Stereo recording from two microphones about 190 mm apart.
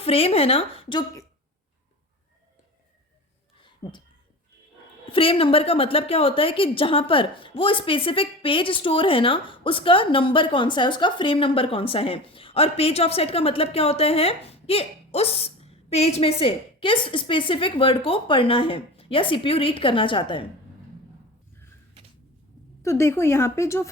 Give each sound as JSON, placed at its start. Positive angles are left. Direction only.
{"t": 0.0, "sound": "speech", "side_deg": 30}
{"t": 3.8, "sound": "a woman's voice", "side_deg": 20}
{"t": 5.0, "sound": "a woman's voice", "side_deg": 30}
{"t": 22.8, "sound": "a woman's voice", "side_deg": 15}